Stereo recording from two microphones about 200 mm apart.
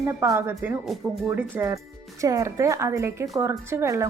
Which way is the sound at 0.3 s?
10° right (ahead or behind).